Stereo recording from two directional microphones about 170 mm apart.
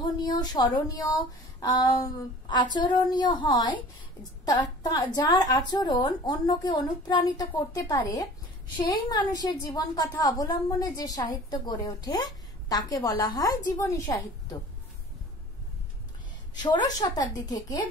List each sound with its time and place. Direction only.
0.0 s a woman's voice: 25° left (ahead or behind)
16.5 s a woman's voice: 25° left (ahead or behind)